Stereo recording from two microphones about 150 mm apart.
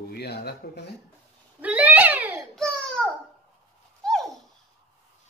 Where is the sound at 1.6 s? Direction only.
10° right (ahead or behind).